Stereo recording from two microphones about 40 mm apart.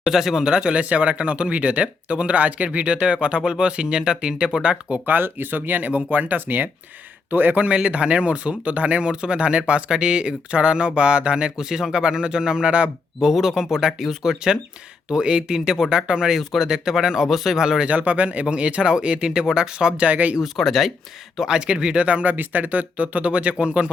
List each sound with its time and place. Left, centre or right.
0.1 s speech: centre
0.4 s speech: right
5.0 s speech: right
7.8 s speech: right
11.6 s speech: centre
13.3 s speech: centre
17.6 s speech: centre
17.8 s speech: right
20.0 s speech: right
20.4 s speech: centre
21.4 s speech: right
22.0 s speech: right